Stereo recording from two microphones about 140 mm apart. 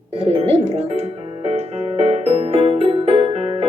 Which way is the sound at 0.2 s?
45° right (ahead or behind).